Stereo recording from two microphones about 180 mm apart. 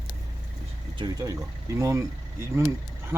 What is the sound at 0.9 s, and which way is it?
Speech, 20° right (ahead or behind).